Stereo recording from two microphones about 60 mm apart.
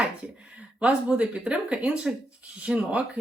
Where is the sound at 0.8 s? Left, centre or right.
Centre.